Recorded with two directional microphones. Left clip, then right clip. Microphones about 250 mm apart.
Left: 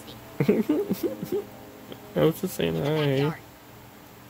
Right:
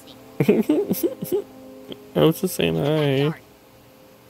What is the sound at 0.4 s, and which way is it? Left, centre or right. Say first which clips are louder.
Speech: right 5 dB; right.